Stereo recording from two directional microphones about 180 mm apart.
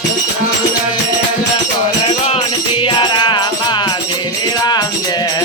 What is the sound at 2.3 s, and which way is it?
Music, 30° left (ahead or behind).